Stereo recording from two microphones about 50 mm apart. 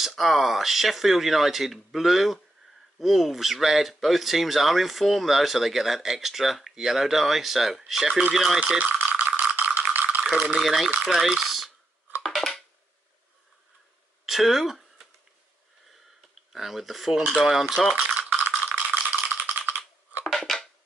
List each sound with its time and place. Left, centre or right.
0.0 s speech: centre
8.7 s rattle: right
10.2 s speech: right
10.6 s speech: centre
12.2 s a sound: centre
14.2 s a sound: centre
16.5 s speech: centre
18.1 s rattle: right
19.1 s typing: right
20.3 s scissors: centre